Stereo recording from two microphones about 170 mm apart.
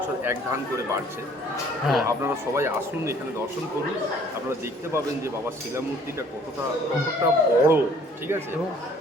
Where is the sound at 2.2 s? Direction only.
15° right (ahead or behind).